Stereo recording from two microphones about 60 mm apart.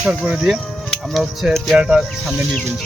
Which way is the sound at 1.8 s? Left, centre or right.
Centre.